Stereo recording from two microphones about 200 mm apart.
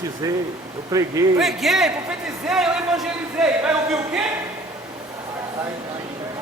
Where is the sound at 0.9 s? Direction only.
15° right (ahead or behind).